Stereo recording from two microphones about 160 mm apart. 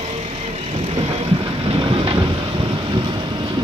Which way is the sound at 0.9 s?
40° right (ahead or behind).